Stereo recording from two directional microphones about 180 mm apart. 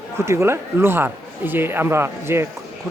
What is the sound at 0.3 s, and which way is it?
Speech, 15° right (ahead or behind).